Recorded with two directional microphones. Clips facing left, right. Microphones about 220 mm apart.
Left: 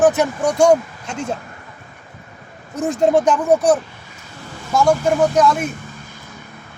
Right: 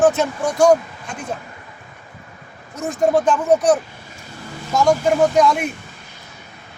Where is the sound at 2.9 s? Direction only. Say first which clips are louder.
Left 1 dB; 20° left (ahead or behind).